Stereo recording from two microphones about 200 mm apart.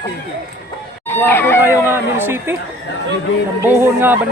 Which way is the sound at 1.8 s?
10° right (ahead or behind).